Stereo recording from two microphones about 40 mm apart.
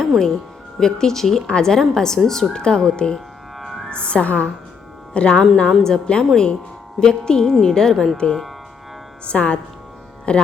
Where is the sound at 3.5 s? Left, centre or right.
Centre.